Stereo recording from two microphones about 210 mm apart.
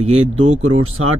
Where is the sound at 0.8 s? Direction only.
90° right.